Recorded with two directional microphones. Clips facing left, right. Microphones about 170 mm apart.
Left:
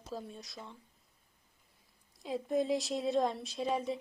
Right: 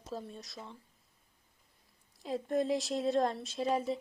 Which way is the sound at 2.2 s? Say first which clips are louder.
Even; centre (ahead or behind).